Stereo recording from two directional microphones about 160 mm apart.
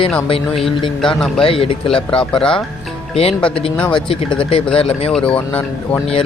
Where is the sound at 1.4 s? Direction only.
35° left (ahead or behind).